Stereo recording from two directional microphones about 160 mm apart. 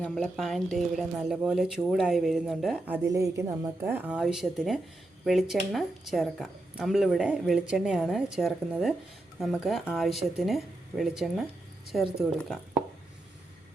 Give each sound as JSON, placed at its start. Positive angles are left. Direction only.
{"t": 0.0, "sound": "a woman's voice", "side_deg": 5}